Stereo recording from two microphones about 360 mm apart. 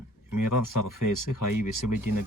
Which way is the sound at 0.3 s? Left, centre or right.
Left.